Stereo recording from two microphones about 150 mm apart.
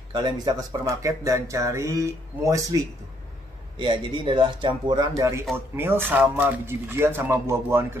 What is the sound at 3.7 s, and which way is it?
Speech, 35° right (ahead or behind).